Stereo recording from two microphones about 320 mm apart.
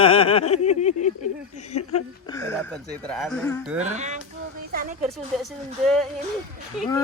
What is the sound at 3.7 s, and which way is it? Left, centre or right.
Speech, right.